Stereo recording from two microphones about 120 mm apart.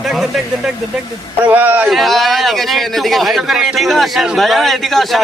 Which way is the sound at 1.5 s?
15° right (ahead or behind).